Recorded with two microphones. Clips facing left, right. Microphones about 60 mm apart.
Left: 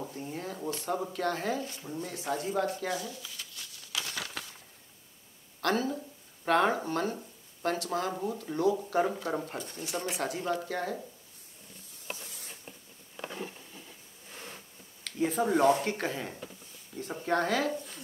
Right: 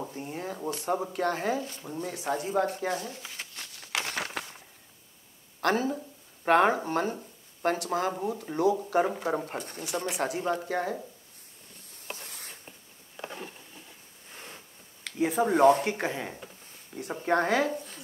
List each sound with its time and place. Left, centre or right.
0.1 s a sound: right
0.7 s speech: right
2.9 s crumpling: right
5.6 s speech: right
9.6 s speech: right
10.1 s speech: right
12.2 s a sound: right
12.6 s a sound: centre
13.4 s patter: centre
14.3 s insect: right
15.0 s a sound: centre
15.4 s speech: right
15.9 s speech: centre
17.7 s speech: centre